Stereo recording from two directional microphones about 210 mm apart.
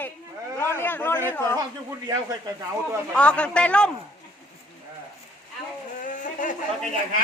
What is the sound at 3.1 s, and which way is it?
Speech, 5° left (ahead or behind).